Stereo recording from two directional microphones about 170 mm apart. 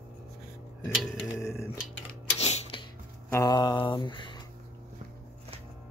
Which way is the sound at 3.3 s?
20° left (ahead or behind).